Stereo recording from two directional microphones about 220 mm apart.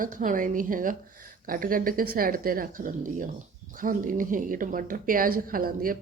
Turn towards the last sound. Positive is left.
turn(degrees=-40)  # may be behind; listen again after turning